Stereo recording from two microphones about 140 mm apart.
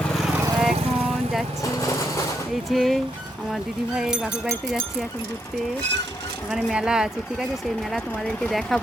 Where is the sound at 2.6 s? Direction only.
Centre (ahead or behind).